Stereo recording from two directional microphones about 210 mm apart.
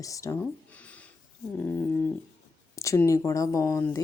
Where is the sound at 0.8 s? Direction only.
5° left (ahead or behind).